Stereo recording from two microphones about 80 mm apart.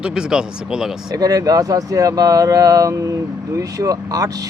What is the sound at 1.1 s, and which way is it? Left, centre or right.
Speech, right.